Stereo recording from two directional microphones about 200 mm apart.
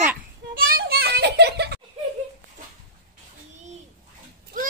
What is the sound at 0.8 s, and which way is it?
Music, 55° right (ahead or behind).